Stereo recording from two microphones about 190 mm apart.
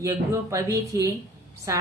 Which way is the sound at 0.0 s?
15° right (ahead or behind).